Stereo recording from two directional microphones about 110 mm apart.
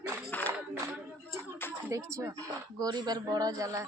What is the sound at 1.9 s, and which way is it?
A man's voice, 30° right (ahead or behind).